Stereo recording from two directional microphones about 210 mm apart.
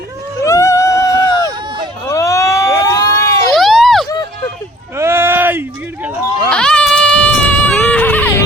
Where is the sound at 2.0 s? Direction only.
15° left (ahead or behind).